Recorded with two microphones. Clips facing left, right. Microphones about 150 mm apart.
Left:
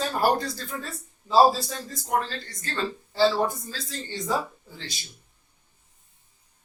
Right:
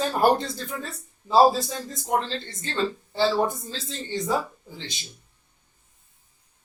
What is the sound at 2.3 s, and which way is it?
Speech, 25° right (ahead or behind).